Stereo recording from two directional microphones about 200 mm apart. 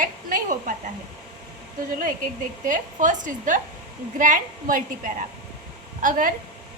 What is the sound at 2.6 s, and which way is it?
A woman's voice, 40° right (ahead or behind).